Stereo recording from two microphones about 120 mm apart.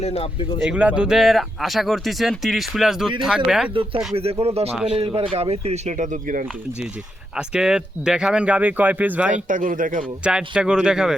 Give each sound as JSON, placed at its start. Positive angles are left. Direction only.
{"t": 0.0, "sound": "speech", "side_deg": 55}
{"t": 0.6, "sound": "speech", "side_deg": -10}
{"t": 4.1, "sound": "speech", "side_deg": -55}
{"t": 7.3, "sound": "speech", "side_deg": -5}
{"t": 9.3, "sound": "a man's voice", "side_deg": -90}
{"t": 10.2, "sound": "speech", "side_deg": -5}